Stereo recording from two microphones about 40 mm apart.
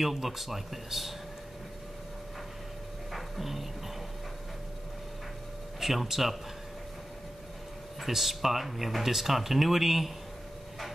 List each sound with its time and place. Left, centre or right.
0.0 s speech: centre
3.1 s music: centre
5.8 s speech: centre
8.0 s speech: centre